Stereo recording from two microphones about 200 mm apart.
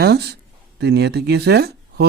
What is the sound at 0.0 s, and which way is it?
Speech, 55° right (ahead or behind).